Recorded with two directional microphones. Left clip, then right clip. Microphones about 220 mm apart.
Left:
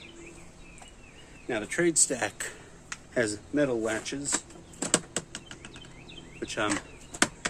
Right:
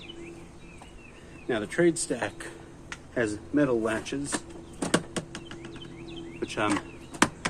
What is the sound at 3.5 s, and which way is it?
Speech, 30° left (ahead or behind).